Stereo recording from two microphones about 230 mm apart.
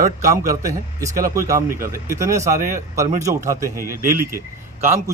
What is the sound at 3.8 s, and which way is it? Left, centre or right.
Speech, right.